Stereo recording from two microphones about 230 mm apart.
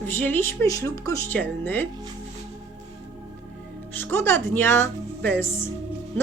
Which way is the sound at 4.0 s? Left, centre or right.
Centre.